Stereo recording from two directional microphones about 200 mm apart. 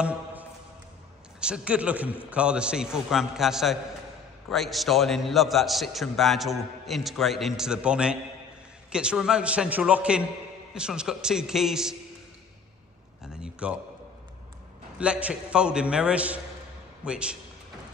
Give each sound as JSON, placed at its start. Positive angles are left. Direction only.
{"t": 0.0, "sound": "a sound", "side_deg": -10}
{"t": 1.4, "sound": "a man's voice", "side_deg": -5}
{"t": 13.2, "sound": "a man's voice", "side_deg": -5}
{"t": 15.0, "sound": "a man's voice", "side_deg": -5}